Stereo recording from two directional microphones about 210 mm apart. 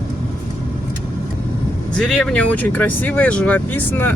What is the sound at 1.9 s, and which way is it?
Speech, 5° left (ahead or behind).